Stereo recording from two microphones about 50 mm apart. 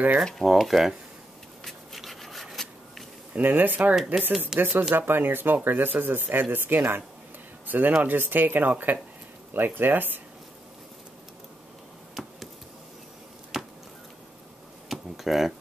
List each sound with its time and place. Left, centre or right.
0.2 s speech: centre
1.6 s a sound: centre
3.3 s speech: right
3.9 s speech: centre
4.6 s speech: right
14.9 s a sound: centre